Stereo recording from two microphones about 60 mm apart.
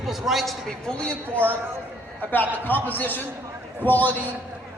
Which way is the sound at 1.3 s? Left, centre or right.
Right.